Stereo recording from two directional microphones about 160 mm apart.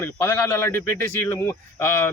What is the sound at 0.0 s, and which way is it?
Speech, 15° left (ahead or behind).